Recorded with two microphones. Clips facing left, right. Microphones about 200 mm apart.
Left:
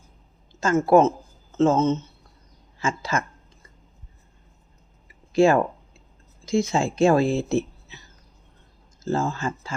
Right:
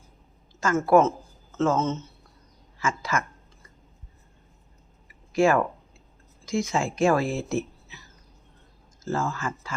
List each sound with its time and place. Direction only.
0.6 s speech: 25° left (ahead or behind)
5.3 s speech: 25° left (ahead or behind)
9.0 s speech: 25° left (ahead or behind)